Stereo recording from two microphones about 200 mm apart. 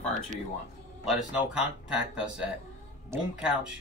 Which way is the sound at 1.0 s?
Centre (ahead or behind).